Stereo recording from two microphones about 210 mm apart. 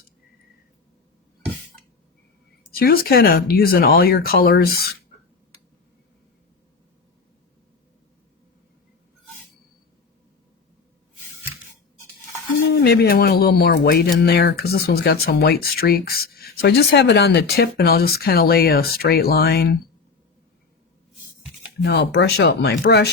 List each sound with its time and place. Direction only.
2.7 s speech: 45° left (ahead or behind)
12.6 s speech: 50° left (ahead or behind)
21.8 s speech: 55° left (ahead or behind)